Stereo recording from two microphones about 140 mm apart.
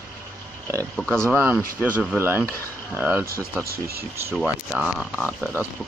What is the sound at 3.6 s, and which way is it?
Speech, 90° right.